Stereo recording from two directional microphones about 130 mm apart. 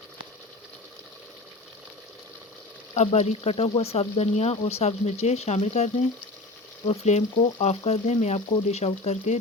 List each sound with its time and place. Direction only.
2.9 s speech: 60° left (ahead or behind)